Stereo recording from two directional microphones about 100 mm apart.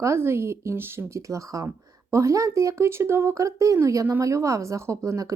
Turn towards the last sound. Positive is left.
turn(degrees=-30)  # may be behind; listen again after turning